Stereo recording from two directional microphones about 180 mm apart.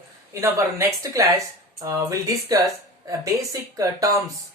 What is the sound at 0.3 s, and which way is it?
Speech, 15° right (ahead or behind).